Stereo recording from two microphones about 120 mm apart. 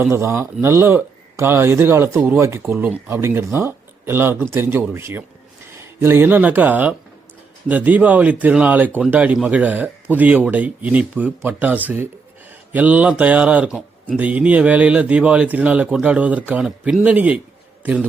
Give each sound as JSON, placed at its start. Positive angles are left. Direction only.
{"t": 0.0, "sound": "speech", "side_deg": -20}